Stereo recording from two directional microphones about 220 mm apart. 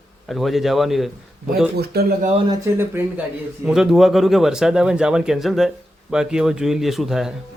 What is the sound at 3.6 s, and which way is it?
A man's voice, centre (ahead or behind).